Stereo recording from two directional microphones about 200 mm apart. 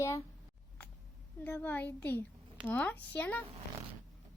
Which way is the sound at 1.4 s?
10° left (ahead or behind).